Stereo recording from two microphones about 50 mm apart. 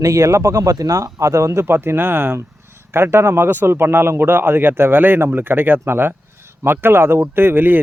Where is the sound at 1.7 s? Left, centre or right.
Right.